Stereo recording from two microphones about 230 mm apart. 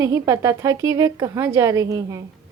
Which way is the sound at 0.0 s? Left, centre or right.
Centre.